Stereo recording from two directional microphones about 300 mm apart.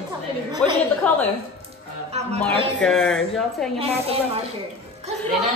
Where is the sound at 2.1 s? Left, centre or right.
Right.